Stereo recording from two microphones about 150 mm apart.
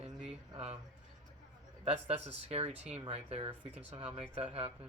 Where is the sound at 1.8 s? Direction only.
40° right (ahead or behind).